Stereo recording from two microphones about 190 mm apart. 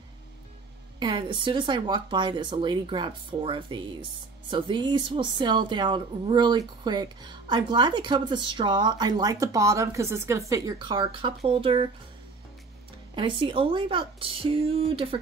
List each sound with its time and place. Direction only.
0.9 s speech: 25° right (ahead or behind)
13.1 s speech: 25° right (ahead or behind)